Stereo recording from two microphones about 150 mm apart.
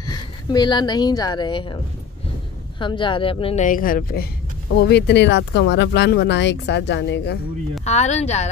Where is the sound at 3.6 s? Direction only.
65° left (ahead or behind).